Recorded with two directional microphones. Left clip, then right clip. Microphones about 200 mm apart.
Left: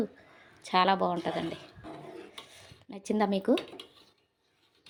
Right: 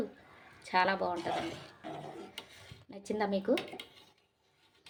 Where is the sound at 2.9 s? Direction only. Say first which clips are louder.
Left 4 dB; 35° left (ahead or behind).